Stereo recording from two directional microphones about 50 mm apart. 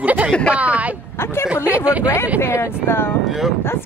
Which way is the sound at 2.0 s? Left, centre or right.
Left.